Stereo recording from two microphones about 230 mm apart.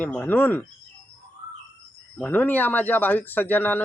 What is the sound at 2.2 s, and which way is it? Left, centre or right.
Speech, centre.